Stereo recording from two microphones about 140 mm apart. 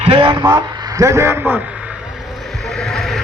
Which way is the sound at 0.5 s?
20° right (ahead or behind).